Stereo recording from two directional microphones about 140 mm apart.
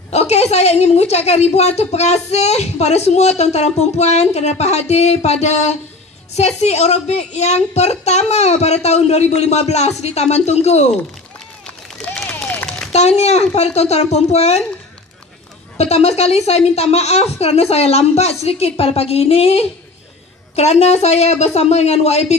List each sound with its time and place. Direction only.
0.1 s a woman's voice: 50° left (ahead or behind)
11.6 s run: 5° left (ahead or behind)
12.9 s a woman's voice: 50° left (ahead or behind)
15.8 s a woman's voice: 50° left (ahead or behind)